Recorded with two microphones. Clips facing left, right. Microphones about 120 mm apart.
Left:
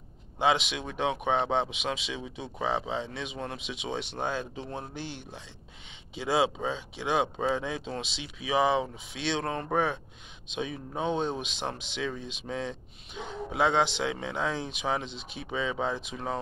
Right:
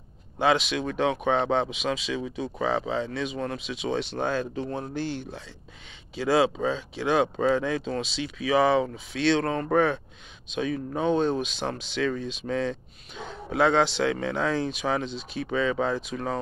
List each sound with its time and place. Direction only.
0.4 s speech: 20° left (ahead or behind)